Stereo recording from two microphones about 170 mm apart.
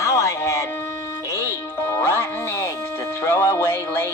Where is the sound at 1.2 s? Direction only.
15° left (ahead or behind).